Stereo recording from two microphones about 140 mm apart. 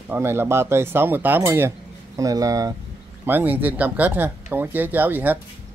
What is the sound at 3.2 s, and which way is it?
Speech, 15° right (ahead or behind).